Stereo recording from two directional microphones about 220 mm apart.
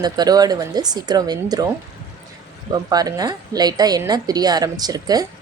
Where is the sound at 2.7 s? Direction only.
15° right (ahead or behind).